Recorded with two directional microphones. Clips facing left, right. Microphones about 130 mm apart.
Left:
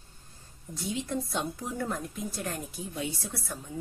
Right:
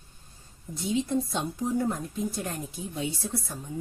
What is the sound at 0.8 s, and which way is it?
Speech, 20° right (ahead or behind).